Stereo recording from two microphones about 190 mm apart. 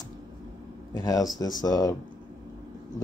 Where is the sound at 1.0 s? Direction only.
15° left (ahead or behind).